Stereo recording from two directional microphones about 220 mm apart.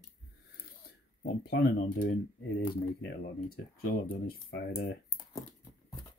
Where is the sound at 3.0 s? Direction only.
40° left (ahead or behind).